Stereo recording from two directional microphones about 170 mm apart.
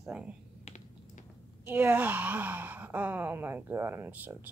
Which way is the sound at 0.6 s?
45° left (ahead or behind).